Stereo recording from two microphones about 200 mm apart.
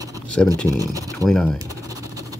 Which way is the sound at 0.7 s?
15° right (ahead or behind).